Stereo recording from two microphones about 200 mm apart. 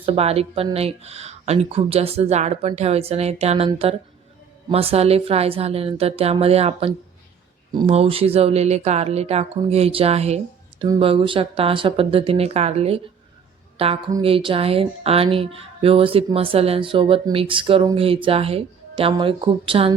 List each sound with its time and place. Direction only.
0.0 s speech: 30° right (ahead or behind)
4.7 s a woman's voice: 30° right (ahead or behind)